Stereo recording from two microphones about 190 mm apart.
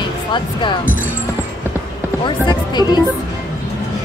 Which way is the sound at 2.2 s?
20° left (ahead or behind).